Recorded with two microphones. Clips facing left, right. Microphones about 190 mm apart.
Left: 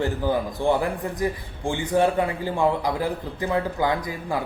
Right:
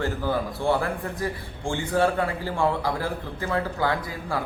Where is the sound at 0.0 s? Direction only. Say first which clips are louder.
Left 2 dB; 15° left (ahead or behind).